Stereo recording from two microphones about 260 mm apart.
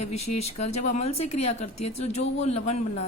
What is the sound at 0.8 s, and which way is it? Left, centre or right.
Speech, left.